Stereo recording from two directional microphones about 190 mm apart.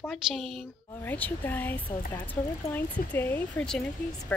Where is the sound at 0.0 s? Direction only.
Centre (ahead or behind).